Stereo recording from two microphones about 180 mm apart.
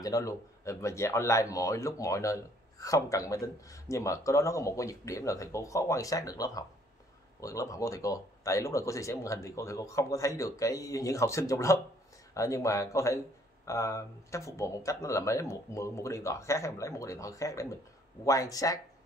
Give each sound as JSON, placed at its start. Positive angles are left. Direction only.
{"t": 0.0, "sound": "speech", "side_deg": 20}